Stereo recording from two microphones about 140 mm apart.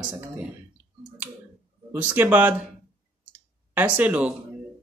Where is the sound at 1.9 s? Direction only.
10° right (ahead or behind).